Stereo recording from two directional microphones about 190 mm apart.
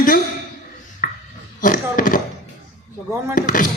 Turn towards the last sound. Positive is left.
turn(degrees=45)  # may be behind; listen again after turning